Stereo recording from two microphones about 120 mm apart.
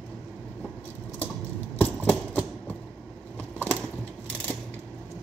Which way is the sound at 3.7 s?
10° left (ahead or behind).